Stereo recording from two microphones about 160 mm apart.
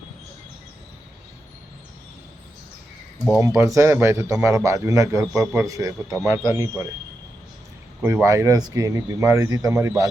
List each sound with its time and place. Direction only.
3.4 s a man's voice: 20° right (ahead or behind)
8.0 s speech: 15° right (ahead or behind)